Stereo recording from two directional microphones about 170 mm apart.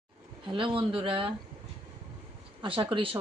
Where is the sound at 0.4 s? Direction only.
30° right (ahead or behind).